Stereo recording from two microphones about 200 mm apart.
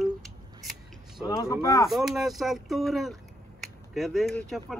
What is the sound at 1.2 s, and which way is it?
Speech, 15° left (ahead or behind).